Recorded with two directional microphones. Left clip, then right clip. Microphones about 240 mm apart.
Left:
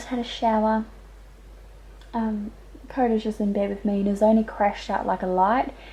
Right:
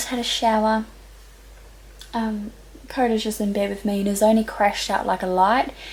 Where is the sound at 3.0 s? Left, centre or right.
Centre.